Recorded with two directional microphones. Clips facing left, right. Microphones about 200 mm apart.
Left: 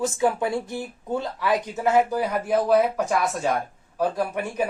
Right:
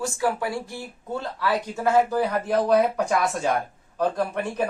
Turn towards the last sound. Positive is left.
turn(degrees=10)  # may be behind; listen again after turning